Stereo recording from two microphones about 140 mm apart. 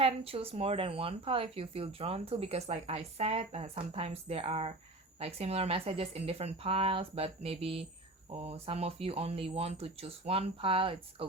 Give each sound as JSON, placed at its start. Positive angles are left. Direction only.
{"t": 0.0, "sound": "speech", "side_deg": -45}